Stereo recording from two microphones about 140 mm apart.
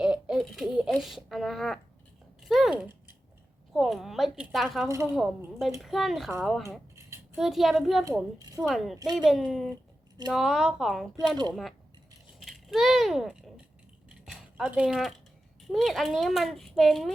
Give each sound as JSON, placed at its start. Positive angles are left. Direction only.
{"t": 0.0, "sound": "a sound", "side_deg": -5}
{"t": 3.7, "sound": "a child's voice", "side_deg": 0}
{"t": 4.9, "sound": "speech", "side_deg": -20}
{"t": 5.8, "sound": "a child's voice", "side_deg": 0}
{"t": 6.6, "sound": "a sound", "side_deg": -20}
{"t": 7.3, "sound": "a child's voice", "side_deg": 0}
{"t": 11.3, "sound": "speech", "side_deg": -30}
{"t": 12.4, "sound": "a child's voice", "side_deg": 0}
{"t": 14.1, "sound": "a sound", "side_deg": -5}
{"t": 15.6, "sound": "a child's voice", "side_deg": 0}